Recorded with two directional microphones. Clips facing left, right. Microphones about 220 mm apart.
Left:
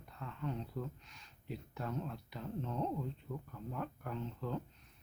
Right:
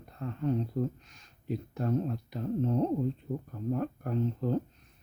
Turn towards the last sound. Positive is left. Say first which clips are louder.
# right 11 dB
turn(degrees=-45)  # may be behind; listen again after turning